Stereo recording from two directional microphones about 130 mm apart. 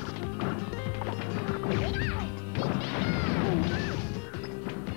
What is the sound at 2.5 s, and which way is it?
Smash, 30° left (ahead or behind).